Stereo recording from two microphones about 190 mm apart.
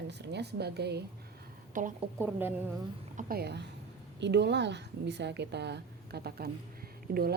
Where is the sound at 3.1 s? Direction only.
55° right (ahead or behind).